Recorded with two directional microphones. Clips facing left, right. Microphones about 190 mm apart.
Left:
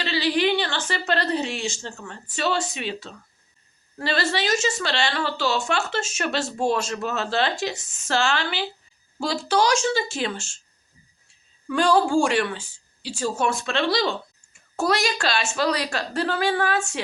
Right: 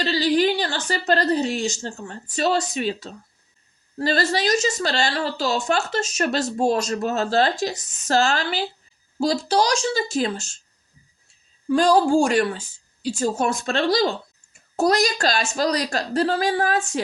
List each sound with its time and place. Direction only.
0.0 s a woman's voice: 40° right (ahead or behind)
11.7 s a woman's voice: 40° right (ahead or behind)